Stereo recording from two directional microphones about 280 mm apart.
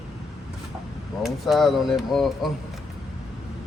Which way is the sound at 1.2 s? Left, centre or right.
Centre.